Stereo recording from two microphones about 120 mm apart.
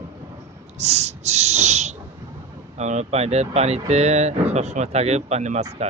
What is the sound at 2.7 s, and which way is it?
Speech, 75° right (ahead or behind).